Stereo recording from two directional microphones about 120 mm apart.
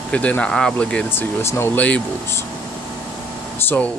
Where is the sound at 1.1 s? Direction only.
20° left (ahead or behind).